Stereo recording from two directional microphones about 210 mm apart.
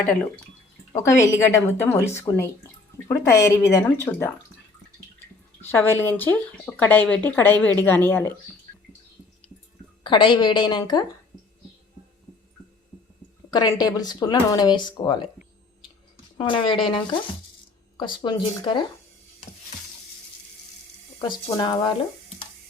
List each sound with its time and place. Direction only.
0.0 s speech: 5° left (ahead or behind)
5.7 s speech: 10° left (ahead or behind)
10.0 s speech: 20° left (ahead or behind)
13.5 s speech: 20° left (ahead or behind)
16.4 s speech: 25° left (ahead or behind)
21.2 s speech: 20° left (ahead or behind)